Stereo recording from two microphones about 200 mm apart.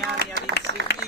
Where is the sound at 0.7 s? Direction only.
65° right (ahead or behind).